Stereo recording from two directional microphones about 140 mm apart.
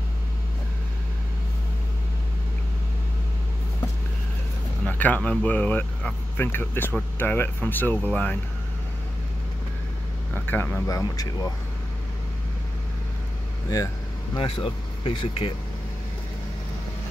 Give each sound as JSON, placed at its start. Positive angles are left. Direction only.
{"t": 4.8, "sound": "speech", "side_deg": 10}
{"t": 10.3, "sound": "speech", "side_deg": 15}
{"t": 14.3, "sound": "speech", "side_deg": 35}